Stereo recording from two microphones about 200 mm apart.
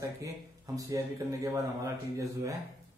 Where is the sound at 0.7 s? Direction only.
15° right (ahead or behind).